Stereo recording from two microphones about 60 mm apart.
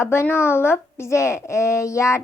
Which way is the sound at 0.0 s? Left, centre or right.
Left.